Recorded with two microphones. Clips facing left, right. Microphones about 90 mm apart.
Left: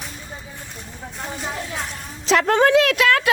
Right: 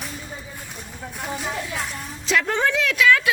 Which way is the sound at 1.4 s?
Centre (ahead or behind).